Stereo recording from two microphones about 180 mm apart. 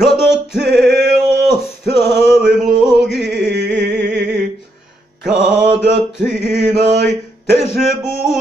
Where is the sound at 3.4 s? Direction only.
70° right (ahead or behind).